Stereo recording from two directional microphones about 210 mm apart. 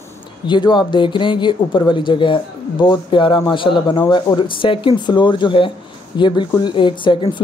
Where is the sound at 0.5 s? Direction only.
20° left (ahead or behind).